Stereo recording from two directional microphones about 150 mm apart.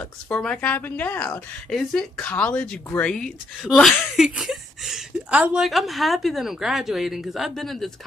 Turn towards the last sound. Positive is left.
turn(degrees=0)  # may be behind; listen again after turning